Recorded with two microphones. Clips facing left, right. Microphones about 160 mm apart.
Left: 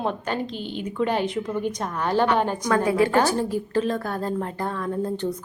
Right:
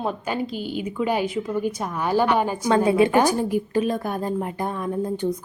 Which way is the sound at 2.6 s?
25° right (ahead or behind).